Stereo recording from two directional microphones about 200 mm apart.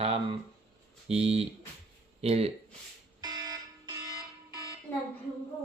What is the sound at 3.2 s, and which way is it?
Fire alarm, 20° right (ahead or behind).